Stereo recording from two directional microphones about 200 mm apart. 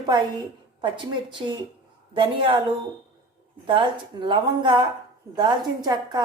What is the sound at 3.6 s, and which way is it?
Speech, 25° right (ahead or behind).